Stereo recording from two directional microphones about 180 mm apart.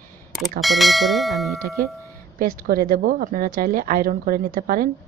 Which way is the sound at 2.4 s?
55° right (ahead or behind).